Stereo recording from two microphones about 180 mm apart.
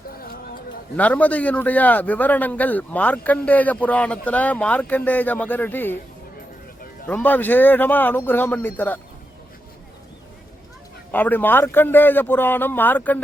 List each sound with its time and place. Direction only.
0.2 s a sound: 55° left (ahead or behind)
0.9 s a man's voice: 10° left (ahead or behind)
7.1 s a man's voice: 10° left (ahead or behind)
11.1 s a man's voice: 10° left (ahead or behind)